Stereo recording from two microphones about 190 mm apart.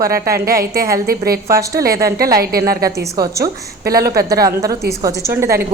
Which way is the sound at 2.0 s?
55° right (ahead or behind).